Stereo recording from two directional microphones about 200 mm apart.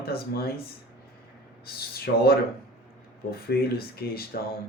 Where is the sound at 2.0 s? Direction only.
50° left (ahead or behind).